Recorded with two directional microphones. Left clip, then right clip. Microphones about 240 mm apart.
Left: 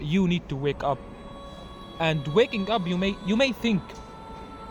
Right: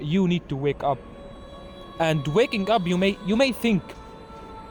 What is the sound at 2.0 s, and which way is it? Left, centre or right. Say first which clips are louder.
Speech: right 1 dB; right.